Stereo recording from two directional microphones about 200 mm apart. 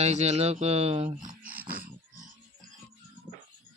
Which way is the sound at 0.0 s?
35° right (ahead or behind).